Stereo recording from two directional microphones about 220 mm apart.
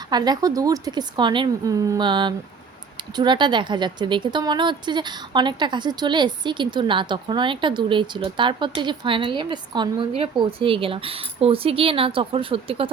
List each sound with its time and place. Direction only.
0.1 s speech: 20° right (ahead or behind)